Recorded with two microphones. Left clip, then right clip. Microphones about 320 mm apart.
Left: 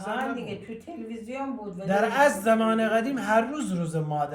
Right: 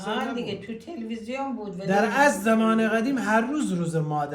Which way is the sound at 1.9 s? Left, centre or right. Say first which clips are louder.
Right 1 dB; centre.